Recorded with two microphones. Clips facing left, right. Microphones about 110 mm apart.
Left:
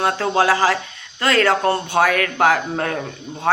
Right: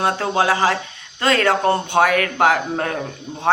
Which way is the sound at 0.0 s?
20° right (ahead or behind).